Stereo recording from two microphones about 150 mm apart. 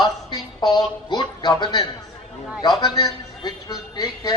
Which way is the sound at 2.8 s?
25° left (ahead or behind).